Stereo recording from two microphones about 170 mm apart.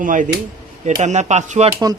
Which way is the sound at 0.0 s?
50° right (ahead or behind).